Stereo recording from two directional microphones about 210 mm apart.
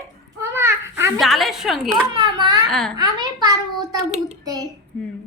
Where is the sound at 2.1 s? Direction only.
20° right (ahead or behind).